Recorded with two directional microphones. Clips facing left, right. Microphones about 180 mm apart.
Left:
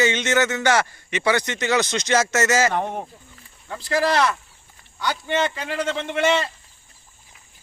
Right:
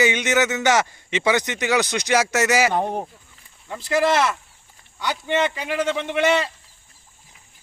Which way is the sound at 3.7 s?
20° right (ahead or behind).